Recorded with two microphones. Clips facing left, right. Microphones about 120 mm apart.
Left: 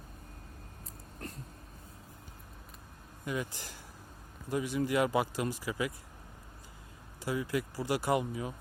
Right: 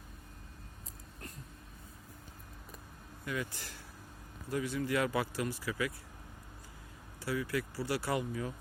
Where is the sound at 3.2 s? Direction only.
20° left (ahead or behind).